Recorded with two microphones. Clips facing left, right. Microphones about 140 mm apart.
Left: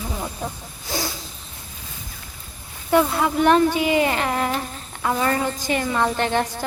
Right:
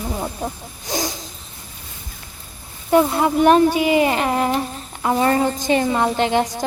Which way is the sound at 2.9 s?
20° right (ahead or behind).